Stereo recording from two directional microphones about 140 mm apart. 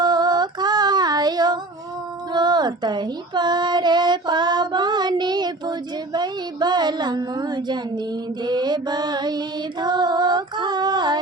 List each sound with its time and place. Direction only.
0.0 s female singing: 30° right (ahead or behind)
6.1 s speech: 30° right (ahead or behind)
9.8 s female singing: 30° right (ahead or behind)